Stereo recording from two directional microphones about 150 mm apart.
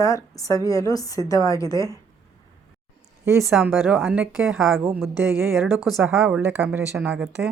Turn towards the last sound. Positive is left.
turn(degrees=-5)  # may be behind; listen again after turning